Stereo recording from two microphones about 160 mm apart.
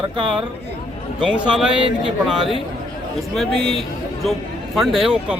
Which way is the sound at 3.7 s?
Centre (ahead or behind).